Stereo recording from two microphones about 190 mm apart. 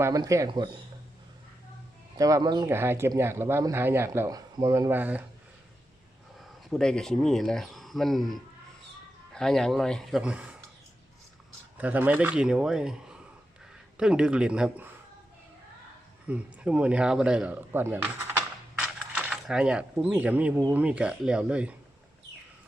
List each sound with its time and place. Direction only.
0.0 s speech: 15° right (ahead or behind)
2.1 s speech: 20° right (ahead or behind)
6.7 s speech: 5° left (ahead or behind)
11.8 s speech: 10° right (ahead or behind)
16.2 s speech: 5° right (ahead or behind)